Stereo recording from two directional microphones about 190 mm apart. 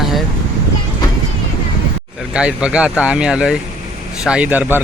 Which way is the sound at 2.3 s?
5° right (ahead or behind).